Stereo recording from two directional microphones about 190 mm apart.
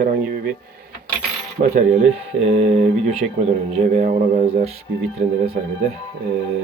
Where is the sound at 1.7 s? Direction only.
40° right (ahead or behind).